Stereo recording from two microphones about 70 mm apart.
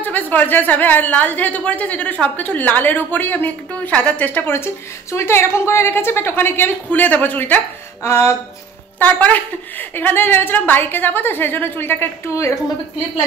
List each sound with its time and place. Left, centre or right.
0.0 s a woman's voice: left
4.5 s a woman's voice: left
9.0 s a woman's voice: left
12.3 s a woman's voice: left